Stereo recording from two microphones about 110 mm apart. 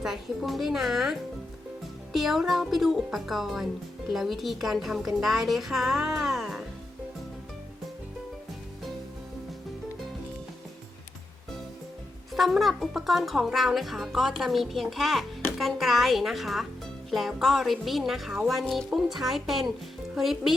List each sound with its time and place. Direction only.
0.0 s speech: centre (ahead or behind)
12.3 s speech: centre (ahead or behind)